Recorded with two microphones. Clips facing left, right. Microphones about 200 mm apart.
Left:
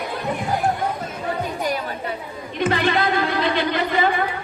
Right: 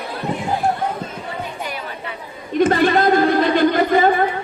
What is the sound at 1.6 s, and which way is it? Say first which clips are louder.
Chatter: left 4 dB; 40° left (ahead or behind).